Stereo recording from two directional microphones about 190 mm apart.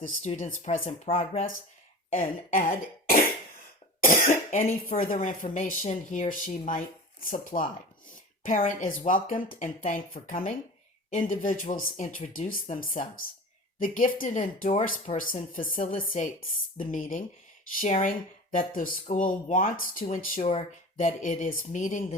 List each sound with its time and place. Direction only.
0.2 s speech: 40° left (ahead or behind)
2.1 s speech: 45° left (ahead or behind)
4.0 s cough: 45° left (ahead or behind)
4.9 s speech: 45° left (ahead or behind)